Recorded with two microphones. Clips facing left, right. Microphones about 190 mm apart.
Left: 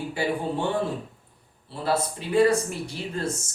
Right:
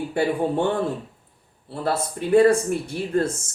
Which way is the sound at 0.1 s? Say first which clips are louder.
Right 5 dB; 55° right (ahead or behind).